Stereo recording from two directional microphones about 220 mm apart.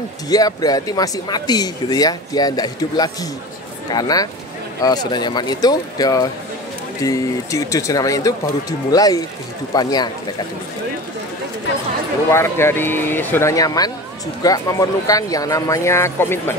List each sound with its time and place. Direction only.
0.3 s speech: 15° left (ahead or behind)
12.3 s speech: 10° left (ahead or behind)